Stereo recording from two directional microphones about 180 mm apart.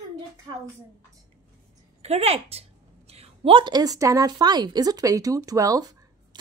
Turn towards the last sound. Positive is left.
turn(degrees=-20)  # may be behind; listen again after turning